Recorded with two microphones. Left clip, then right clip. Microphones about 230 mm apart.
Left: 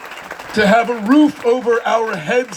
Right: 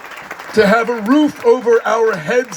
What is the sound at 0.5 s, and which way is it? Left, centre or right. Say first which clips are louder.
A man's voice: right 1 dB; right.